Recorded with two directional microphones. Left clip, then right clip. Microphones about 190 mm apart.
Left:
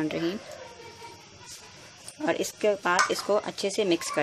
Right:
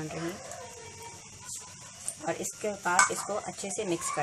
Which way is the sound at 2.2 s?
50° left (ahead or behind).